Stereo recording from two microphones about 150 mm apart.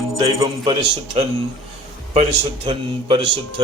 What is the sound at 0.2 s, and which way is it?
Speech, 35° right (ahead or behind).